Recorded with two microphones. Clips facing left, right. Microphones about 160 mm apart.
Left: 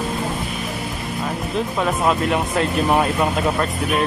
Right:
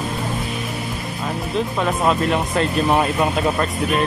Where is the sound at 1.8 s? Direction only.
5° left (ahead or behind).